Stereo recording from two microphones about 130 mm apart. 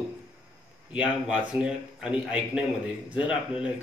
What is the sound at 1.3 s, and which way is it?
A man's voice, 10° right (ahead or behind).